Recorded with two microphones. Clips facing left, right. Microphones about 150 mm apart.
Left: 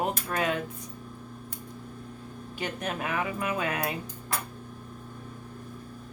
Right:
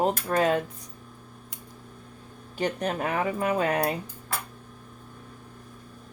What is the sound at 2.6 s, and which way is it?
Speech, 35° right (ahead or behind).